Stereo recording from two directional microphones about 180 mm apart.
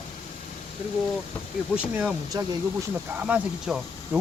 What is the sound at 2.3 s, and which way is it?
Speech, 20° right (ahead or behind).